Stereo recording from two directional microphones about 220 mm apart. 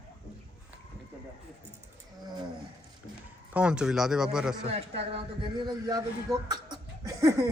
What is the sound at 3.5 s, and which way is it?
Speech, 5° right (ahead or behind).